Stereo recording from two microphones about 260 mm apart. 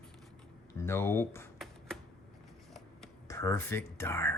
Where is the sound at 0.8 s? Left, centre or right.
Centre.